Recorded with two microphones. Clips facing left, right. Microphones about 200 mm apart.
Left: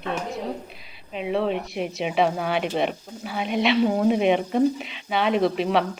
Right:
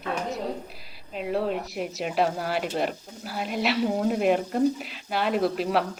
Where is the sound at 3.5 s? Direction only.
Centre (ahead or behind).